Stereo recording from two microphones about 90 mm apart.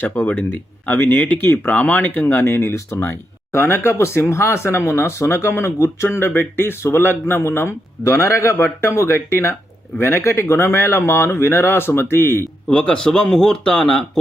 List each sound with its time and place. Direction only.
0.0 s speech: 20° left (ahead or behind)
12.6 s speech: 10° left (ahead or behind)